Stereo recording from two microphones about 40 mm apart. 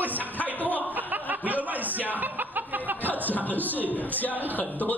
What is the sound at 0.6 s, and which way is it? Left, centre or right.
Speech, left.